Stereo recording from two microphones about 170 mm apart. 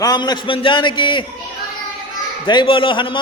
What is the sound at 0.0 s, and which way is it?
A man's voice, 25° left (ahead or behind).